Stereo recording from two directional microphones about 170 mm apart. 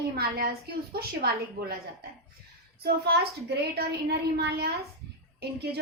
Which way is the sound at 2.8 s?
70° right (ahead or behind).